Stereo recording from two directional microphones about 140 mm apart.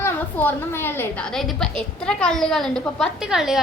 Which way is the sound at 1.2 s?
Centre (ahead or behind).